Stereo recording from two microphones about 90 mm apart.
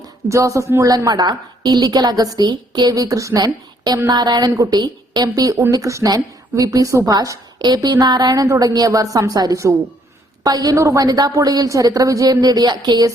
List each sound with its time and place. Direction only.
0.0 s a woman's voice: 35° right (ahead or behind)